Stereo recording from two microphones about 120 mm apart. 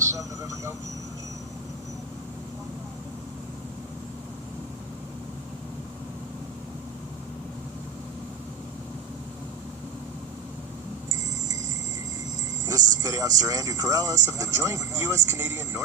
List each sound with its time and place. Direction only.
0.0 s vehicle: 25° right (ahead or behind)
12.6 s speech: 30° right (ahead or behind)